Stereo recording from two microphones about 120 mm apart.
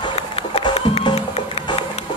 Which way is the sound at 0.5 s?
60° left (ahead or behind).